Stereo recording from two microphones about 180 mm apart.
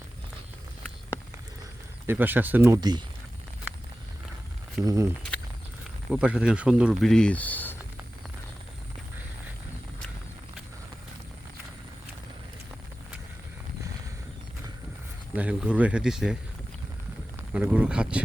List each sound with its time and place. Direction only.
2.0 s speech: 10° right (ahead or behind)
4.8 s speech: 20° right (ahead or behind)
6.1 s speech: 5° right (ahead or behind); by 7.8 s 10° left (ahead or behind)
15.4 s speech: 5° right (ahead or behind)
17.5 s speech: 5° right (ahead or behind)